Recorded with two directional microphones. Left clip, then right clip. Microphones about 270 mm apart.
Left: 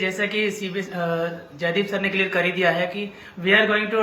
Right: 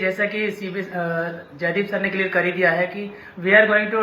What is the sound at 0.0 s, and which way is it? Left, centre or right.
Speech, centre.